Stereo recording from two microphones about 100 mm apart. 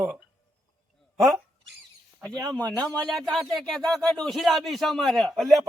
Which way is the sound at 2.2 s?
5° left (ahead or behind).